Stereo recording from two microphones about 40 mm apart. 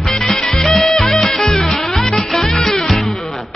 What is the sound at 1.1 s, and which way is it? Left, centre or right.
Music, centre.